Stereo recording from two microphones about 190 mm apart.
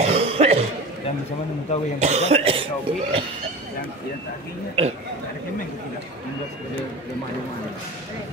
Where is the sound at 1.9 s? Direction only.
35° right (ahead or behind).